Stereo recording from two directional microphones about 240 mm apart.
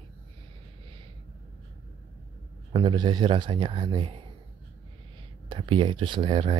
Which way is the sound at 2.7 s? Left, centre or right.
Centre.